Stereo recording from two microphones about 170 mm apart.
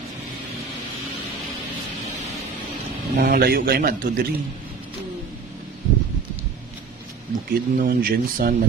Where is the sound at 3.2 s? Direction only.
60° right (ahead or behind).